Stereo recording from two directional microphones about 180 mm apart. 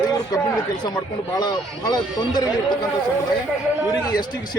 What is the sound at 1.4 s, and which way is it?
Speech, 20° left (ahead or behind).